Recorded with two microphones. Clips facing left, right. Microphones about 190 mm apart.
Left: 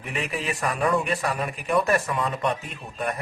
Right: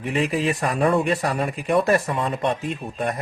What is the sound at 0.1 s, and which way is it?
Speech, 30° right (ahead or behind).